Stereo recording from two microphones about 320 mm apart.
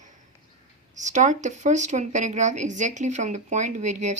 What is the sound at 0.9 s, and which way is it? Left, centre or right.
Speech, right.